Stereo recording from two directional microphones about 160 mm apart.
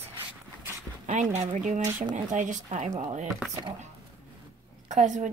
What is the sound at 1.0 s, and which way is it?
Speech, 50° right (ahead or behind).